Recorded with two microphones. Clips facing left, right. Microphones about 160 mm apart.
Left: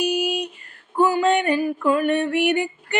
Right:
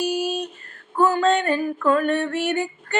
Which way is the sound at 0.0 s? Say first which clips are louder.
Left 1 dB; 15° left (ahead or behind).